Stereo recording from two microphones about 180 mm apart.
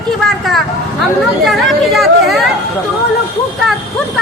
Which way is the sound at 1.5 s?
Centre (ahead or behind).